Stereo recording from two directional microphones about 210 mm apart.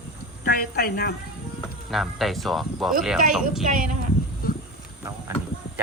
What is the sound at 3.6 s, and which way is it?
Speech, 40° right (ahead or behind).